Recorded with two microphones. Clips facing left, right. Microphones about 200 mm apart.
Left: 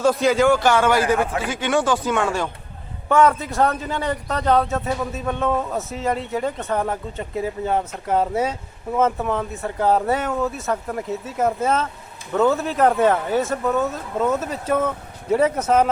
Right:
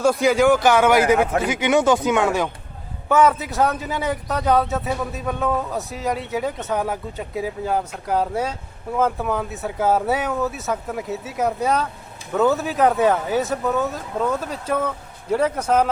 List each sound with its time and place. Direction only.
0.0 s a man's voice: 10° right (ahead or behind)
3.1 s speech: centre (ahead or behind)